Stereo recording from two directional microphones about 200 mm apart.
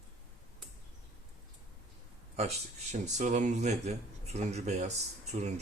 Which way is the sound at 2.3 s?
35° right (ahead or behind).